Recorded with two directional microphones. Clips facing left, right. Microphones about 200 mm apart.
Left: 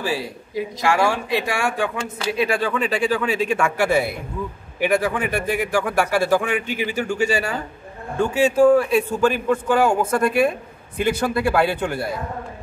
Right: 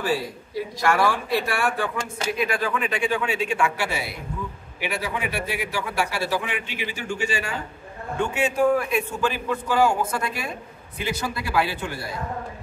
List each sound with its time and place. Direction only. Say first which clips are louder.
0.2 s speech: left 3 dB; 15° left (ahead or behind)
2.3 s speech: left 5 dB; 30° left (ahead or behind)
9.3 s a man's voice: left 6 dB; 50° left (ahead or behind)